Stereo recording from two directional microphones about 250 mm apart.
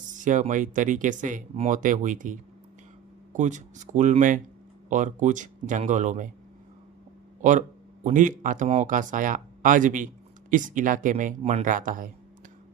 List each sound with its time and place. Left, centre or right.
0.1 s speech: right
8.0 s speech: right